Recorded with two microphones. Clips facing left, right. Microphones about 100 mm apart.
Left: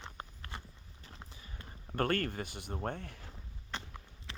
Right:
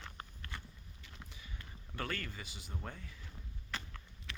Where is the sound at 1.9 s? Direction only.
50° left (ahead or behind); by 3.3 s 70° left (ahead or behind).